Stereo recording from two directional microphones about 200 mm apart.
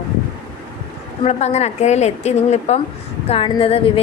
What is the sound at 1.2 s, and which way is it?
A woman's voice, 35° left (ahead or behind).